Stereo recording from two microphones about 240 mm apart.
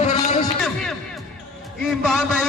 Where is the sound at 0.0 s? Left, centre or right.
Left.